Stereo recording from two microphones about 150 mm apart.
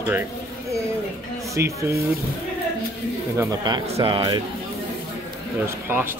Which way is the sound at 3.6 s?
30° right (ahead or behind).